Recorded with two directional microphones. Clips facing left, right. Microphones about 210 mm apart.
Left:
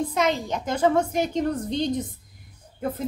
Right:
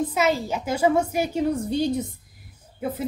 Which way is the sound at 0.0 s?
5° right (ahead or behind).